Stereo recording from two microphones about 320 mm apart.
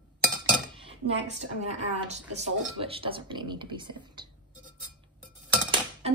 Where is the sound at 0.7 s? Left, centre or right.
Centre.